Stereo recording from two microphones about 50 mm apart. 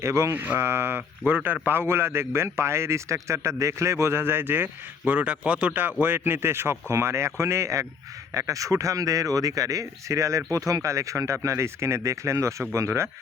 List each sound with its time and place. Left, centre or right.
0.0 s speech: right
0.6 s speech: right
1.3 s speech: right
1.6 s speech: right
4.1 s speech: right
5.1 s speech: right
5.7 s speech: right
12.7 s speech: right